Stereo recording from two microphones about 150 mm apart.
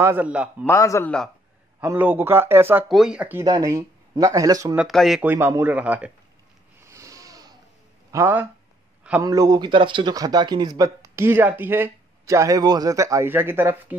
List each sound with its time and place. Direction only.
0.0 s speech: 10° right (ahead or behind)
0.7 s a man's voice: 20° left (ahead or behind)
1.0 s speech: 5° left (ahead or behind)
1.8 s speech: 10° right (ahead or behind)
2.9 s speech: 5° right (ahead or behind)
3.4 s speech: 25° right (ahead or behind)
4.7 s speech: centre (ahead or behind)
5.3 s speech: 15° right (ahead or behind)
6.8 s a sound: 20° right (ahead or behind)
8.1 s speech: 15° right (ahead or behind)